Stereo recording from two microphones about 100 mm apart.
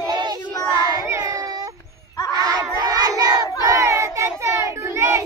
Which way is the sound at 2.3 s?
40° right (ahead or behind).